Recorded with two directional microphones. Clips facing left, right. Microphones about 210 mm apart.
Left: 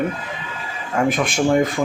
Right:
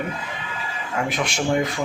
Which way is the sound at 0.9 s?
50° left (ahead or behind).